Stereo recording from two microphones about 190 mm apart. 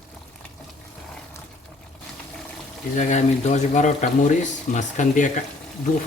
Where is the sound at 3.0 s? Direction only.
40° left (ahead or behind).